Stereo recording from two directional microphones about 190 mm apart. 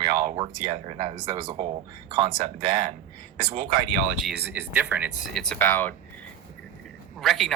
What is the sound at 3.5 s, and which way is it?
Speech, 45° right (ahead or behind).